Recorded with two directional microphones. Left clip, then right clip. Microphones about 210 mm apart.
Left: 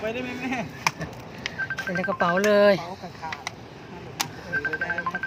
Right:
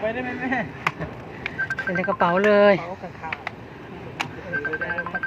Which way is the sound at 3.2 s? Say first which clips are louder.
Right 2 dB; 55° left (ahead or behind).